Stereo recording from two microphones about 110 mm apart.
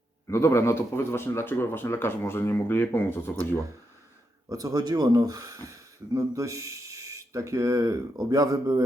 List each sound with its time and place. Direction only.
0.3 s speech: 25° left (ahead or behind)
4.4 s speech: 35° right (ahead or behind)